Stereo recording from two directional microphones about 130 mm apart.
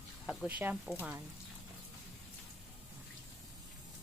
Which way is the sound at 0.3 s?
15° right (ahead or behind).